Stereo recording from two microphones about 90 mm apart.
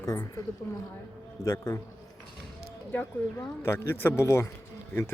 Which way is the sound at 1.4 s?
35° left (ahead or behind).